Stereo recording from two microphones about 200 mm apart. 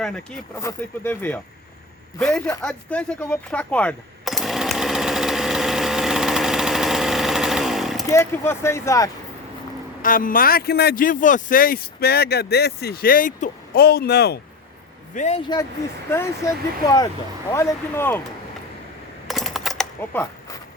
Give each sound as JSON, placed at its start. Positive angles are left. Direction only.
{"t": 0.0, "sound": "speech", "side_deg": 5}
{"t": 2.1, "sound": "a sound", "side_deg": 10}
{"t": 8.0, "sound": "speech", "side_deg": 15}
{"t": 10.0, "sound": "speech", "side_deg": 45}
{"t": 15.1, "sound": "speech", "side_deg": 35}
{"t": 15.4, "sound": "speech", "side_deg": 20}
{"t": 17.5, "sound": "speech", "side_deg": 10}
{"t": 19.3, "sound": "coin", "side_deg": 0}